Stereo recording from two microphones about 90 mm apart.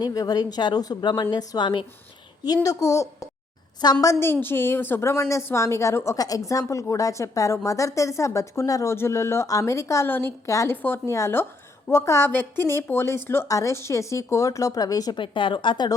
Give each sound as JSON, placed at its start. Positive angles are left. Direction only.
{"t": 0.0, "sound": "a woman's voice", "side_deg": 45}
{"t": 2.6, "sound": "a woman's voice", "side_deg": 35}
{"t": 4.3, "sound": "a woman's voice", "side_deg": 25}
{"t": 6.1, "sound": "a woman's voice", "side_deg": 45}
{"t": 15.1, "sound": "speech", "side_deg": 65}